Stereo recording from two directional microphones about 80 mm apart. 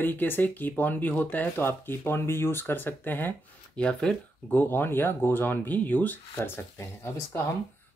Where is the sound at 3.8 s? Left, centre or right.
Centre.